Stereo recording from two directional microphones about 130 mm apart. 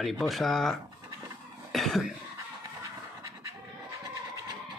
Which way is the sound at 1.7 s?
Centre (ahead or behind).